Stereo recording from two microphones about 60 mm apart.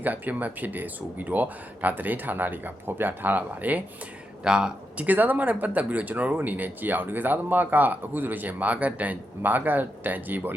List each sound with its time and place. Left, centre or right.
0.0 s speech: right
4.4 s speech: centre
5.0 s speech: right